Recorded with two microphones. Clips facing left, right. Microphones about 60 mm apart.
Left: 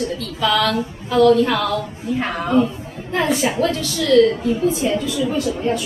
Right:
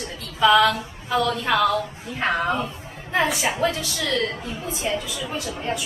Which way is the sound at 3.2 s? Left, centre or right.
Centre.